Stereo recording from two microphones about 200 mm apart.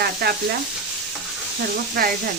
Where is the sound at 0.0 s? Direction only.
50° right (ahead or behind).